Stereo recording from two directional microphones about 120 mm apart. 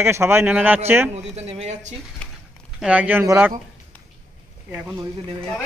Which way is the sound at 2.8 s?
10° right (ahead or behind).